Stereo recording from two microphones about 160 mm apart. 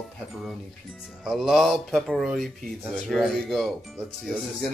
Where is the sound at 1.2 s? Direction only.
Centre (ahead or behind).